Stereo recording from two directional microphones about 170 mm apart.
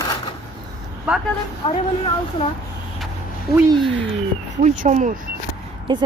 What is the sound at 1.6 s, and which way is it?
Speech, 30° left (ahead or behind).